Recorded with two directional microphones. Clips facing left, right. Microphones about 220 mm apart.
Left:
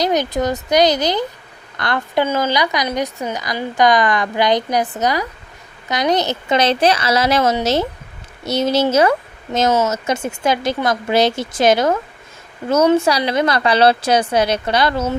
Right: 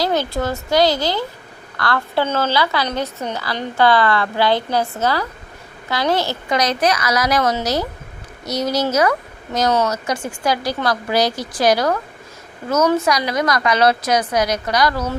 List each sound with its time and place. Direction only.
0.0 s a woman's voice: 15° left (ahead or behind)